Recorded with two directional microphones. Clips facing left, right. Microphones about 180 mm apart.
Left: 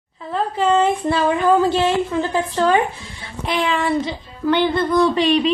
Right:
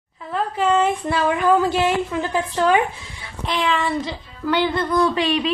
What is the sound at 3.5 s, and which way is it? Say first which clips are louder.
Speech: left 2 dB; 5° left (ahead or behind).